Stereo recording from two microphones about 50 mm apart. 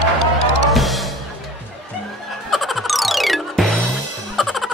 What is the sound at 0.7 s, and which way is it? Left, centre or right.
Music, centre.